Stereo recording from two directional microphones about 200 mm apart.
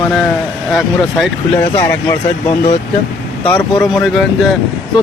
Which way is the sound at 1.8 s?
15° left (ahead or behind).